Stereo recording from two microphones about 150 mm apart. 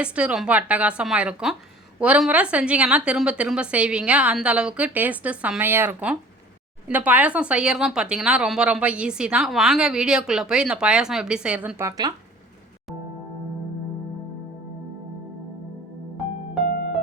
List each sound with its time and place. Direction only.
0.0 s a woman's voice: 10° right (ahead or behind)
11.8 s speech: 25° right (ahead or behind)